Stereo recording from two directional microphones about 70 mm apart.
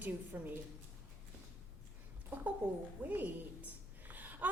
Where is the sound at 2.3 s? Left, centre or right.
Right.